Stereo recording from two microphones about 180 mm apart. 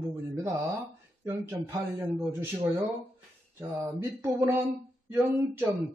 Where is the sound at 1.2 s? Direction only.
10° right (ahead or behind).